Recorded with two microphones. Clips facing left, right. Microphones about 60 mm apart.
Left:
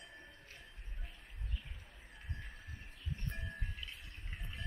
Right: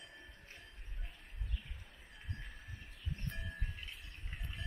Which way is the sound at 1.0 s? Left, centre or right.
Centre.